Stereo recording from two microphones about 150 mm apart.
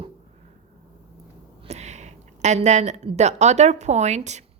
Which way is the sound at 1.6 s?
50° right (ahead or behind).